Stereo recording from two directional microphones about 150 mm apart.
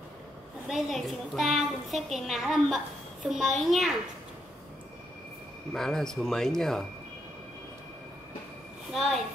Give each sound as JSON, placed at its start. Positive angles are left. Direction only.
{"t": 0.7, "sound": "a woman's voice", "side_deg": 0}
{"t": 5.7, "sound": "a woman's voice", "side_deg": 5}
{"t": 8.9, "sound": "a woman's voice", "side_deg": 0}